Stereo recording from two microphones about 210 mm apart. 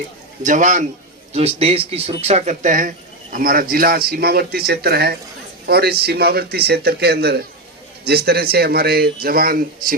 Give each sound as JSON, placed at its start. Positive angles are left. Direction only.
{"t": 0.4, "sound": "a man's voice", "side_deg": -35}